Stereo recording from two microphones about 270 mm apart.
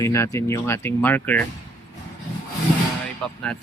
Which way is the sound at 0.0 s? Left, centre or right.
Centre.